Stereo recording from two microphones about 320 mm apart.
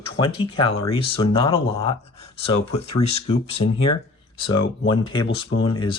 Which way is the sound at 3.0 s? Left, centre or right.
Centre.